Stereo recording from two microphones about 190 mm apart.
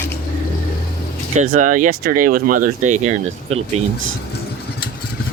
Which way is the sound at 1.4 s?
40° right (ahead or behind).